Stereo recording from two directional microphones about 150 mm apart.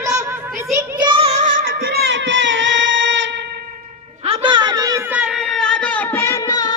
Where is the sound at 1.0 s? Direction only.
40° right (ahead or behind).